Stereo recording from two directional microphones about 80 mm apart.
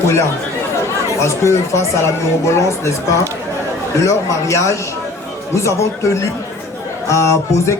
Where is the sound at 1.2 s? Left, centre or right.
Left.